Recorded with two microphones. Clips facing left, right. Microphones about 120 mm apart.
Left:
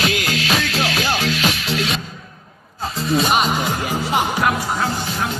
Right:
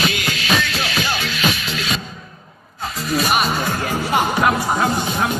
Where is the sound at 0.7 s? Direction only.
90° left.